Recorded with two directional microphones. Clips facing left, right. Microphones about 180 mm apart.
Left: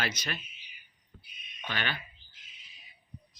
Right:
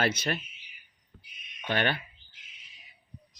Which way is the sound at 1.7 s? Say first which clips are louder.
Right 8 dB; 55° right (ahead or behind).